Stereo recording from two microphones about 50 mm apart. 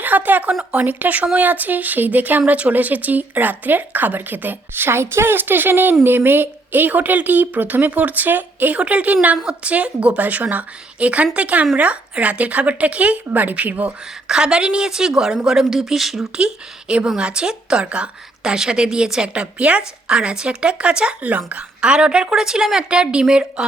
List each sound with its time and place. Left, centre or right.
0.0 s a woman's voice: right
14.3 s speech: centre
17.2 s a woman's voice: centre